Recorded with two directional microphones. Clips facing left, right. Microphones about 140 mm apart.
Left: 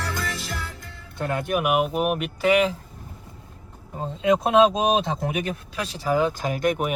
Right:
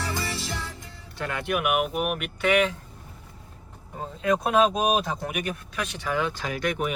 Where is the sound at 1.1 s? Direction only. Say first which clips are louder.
Left 3 dB; 45° left (ahead or behind).